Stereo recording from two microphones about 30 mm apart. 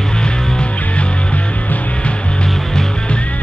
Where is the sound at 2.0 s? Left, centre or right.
Left.